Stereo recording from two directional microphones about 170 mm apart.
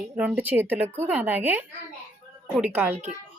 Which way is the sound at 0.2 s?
10° right (ahead or behind).